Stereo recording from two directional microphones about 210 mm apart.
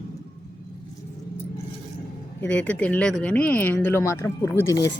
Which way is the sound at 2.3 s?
10° left (ahead or behind).